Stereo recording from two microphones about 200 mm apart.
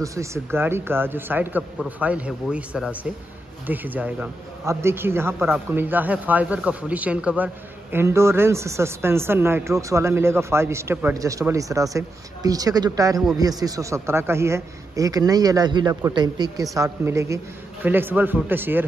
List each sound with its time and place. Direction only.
0.0 s speech: 15° right (ahead or behind)